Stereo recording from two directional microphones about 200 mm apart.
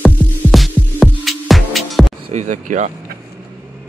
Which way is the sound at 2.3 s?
35° right (ahead or behind).